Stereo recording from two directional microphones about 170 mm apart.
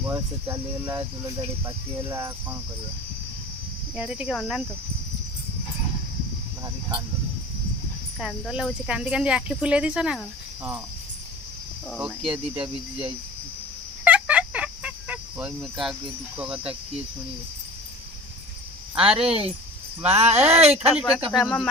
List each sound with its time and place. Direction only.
0.1 s speech: 15° right (ahead or behind)
3.9 s speech: 5° right (ahead or behind)
8.2 s speech: centre (ahead or behind)
11.9 s speech: 5° right (ahead or behind)
14.0 s a sound: 10° right (ahead or behind)
16.4 s speech: 5° right (ahead or behind)
18.9 s speech: 5° right (ahead or behind)
19.2 s speech: 35° right (ahead or behind)
20.9 s speech: 5° right (ahead or behind)